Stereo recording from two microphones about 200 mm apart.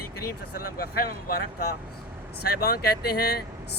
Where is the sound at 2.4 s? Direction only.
50° left (ahead or behind).